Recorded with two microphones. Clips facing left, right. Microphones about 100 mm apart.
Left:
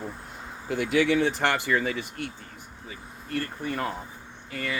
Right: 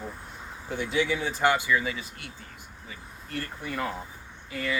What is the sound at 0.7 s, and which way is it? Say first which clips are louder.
Speech: left 4 dB; 90° left.